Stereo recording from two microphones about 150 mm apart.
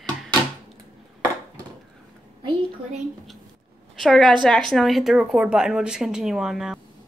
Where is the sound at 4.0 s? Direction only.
Centre (ahead or behind).